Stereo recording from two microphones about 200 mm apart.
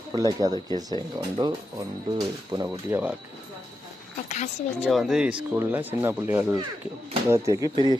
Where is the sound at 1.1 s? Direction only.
20° right (ahead or behind).